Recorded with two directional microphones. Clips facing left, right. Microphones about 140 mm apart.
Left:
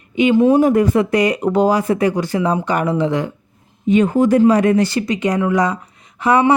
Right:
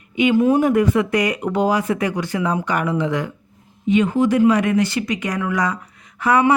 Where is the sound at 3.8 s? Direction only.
40° left (ahead or behind); by 6.5 s 25° left (ahead or behind).